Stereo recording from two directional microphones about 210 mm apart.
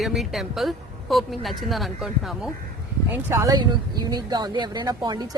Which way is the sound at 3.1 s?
10° right (ahead or behind).